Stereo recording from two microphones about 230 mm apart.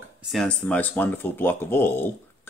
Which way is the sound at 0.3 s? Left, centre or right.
Centre.